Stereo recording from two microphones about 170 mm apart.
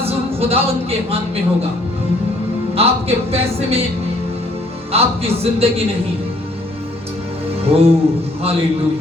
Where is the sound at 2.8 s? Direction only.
35° right (ahead or behind).